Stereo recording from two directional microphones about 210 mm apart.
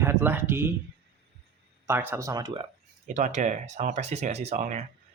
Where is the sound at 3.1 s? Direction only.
35° right (ahead or behind).